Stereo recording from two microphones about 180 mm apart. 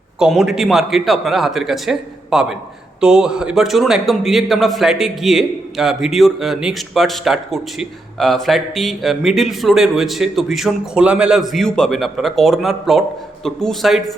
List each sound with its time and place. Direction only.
0.2 s a man's voice: centre (ahead or behind)